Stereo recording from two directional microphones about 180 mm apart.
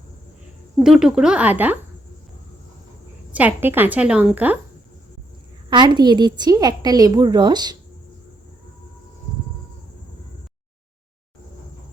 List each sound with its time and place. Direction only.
0.8 s speech: 5° right (ahead or behind)
3.3 s a woman's voice: 10° right (ahead or behind)
5.7 s a woman's voice: 25° right (ahead or behind)